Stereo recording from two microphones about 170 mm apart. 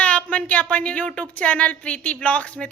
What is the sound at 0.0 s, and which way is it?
A woman's voice, 10° left (ahead or behind).